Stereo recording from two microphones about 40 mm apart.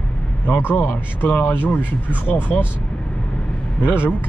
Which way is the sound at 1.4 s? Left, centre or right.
Left.